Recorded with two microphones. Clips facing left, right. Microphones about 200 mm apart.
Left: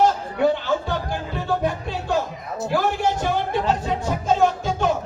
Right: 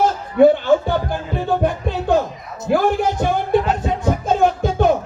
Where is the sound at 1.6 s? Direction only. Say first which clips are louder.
Right 5 dB; 55° right (ahead or behind).